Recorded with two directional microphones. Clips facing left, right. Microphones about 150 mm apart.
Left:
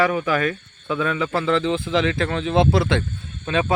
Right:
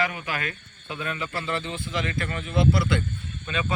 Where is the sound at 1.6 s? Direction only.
90° left.